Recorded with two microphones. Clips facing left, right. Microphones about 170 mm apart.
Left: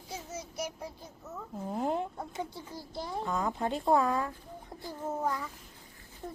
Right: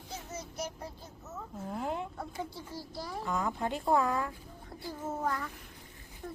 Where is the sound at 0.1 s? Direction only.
10° left (ahead or behind).